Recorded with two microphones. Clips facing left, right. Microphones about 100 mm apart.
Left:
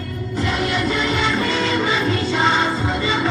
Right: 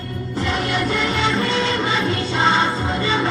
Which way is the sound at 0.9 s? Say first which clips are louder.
Even; 35° right (ahead or behind).